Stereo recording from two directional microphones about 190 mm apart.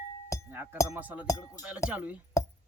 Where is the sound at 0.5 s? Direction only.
10° right (ahead or behind).